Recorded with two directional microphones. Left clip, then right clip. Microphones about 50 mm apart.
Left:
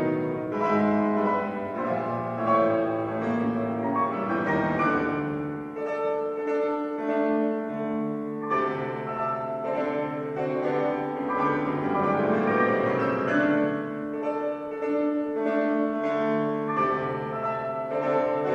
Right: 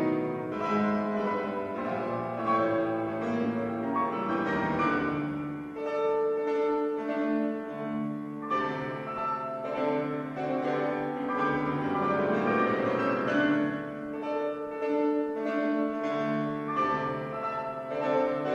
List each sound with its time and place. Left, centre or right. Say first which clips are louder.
2.5 s music: left 4 dB; centre
4.3 s music: left 3 dB; left
7.2 s music: left 5 dB; centre
11.5 s music: left 3 dB; centre
12.5 s music: left 4 dB; left
13.4 s music: left 4 dB; centre
15.4 s music: left 4 dB; left
16.2 s music: left 5 dB; centre
18.0 s music: left 2 dB; left